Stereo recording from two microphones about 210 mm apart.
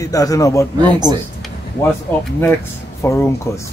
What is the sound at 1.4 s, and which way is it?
A man's voice, 5° left (ahead or behind).